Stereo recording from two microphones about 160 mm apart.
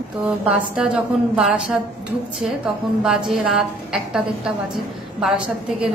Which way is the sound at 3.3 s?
Centre (ahead or behind).